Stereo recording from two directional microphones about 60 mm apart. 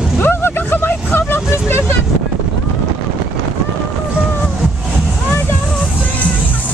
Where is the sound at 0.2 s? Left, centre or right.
Left.